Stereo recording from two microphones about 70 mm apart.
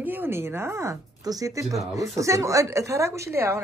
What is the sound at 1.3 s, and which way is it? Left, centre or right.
A woman's voice, right.